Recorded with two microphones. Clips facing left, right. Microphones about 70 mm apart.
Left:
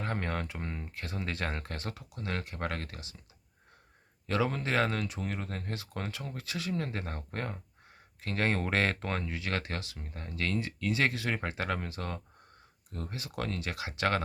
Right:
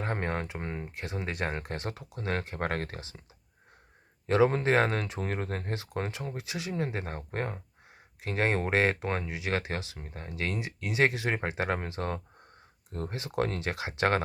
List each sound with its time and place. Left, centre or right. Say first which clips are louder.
0.0 s speech: right 2 dB; right
4.3 s speech: right 7 dB; right